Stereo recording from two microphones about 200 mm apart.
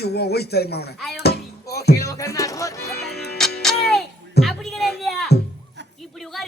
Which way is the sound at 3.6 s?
Centre (ahead or behind).